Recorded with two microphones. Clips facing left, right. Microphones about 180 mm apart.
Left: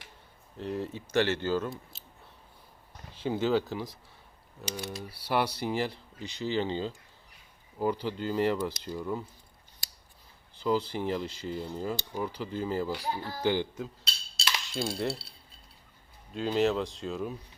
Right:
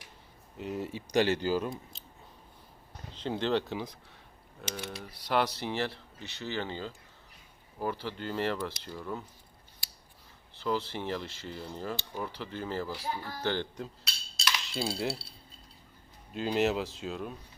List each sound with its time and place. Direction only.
0.5 s speech: 5° right (ahead or behind)
3.2 s speech: 5° left (ahead or behind)
5.1 s cutlery: 10° left (ahead or behind)
10.6 s cutlery: 10° left (ahead or behind)
14.0 s cutlery: 30° left (ahead or behind)
14.6 s speech: 5° right (ahead or behind)
16.3 s speech: centre (ahead or behind)